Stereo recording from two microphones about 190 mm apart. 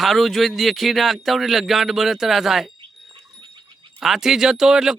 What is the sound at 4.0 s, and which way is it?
Speech, centre (ahead or behind).